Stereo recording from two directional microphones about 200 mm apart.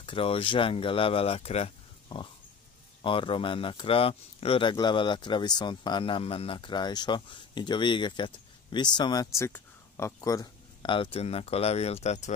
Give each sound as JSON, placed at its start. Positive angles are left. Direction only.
{"t": 0.0, "sound": "speech", "side_deg": 25}